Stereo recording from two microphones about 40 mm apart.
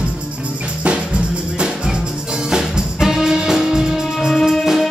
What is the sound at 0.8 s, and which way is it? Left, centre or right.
Music, right.